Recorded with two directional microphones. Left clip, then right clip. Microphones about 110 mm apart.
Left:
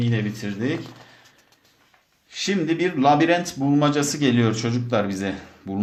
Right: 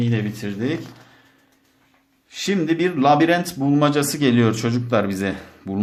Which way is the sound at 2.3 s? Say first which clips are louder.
Right 2 dB; 20° right (ahead or behind).